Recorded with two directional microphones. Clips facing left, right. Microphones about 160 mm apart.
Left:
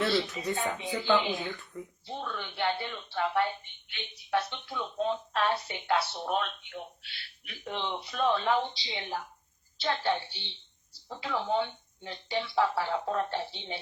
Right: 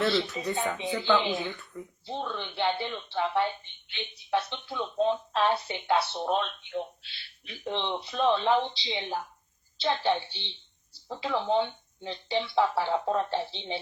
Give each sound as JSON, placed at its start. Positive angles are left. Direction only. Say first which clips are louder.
{"t": 0.2, "sound": "speech", "louder": "right 2 dB", "side_deg": 20}
{"t": 1.3, "sound": "speech", "louder": "right 2 dB", "side_deg": -20}